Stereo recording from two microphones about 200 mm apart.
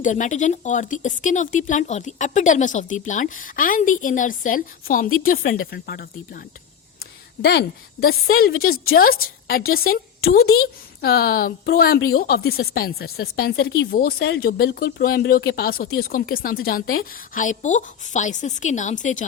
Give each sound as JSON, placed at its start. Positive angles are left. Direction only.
{"t": 0.0, "sound": "a woman's voice", "side_deg": 40}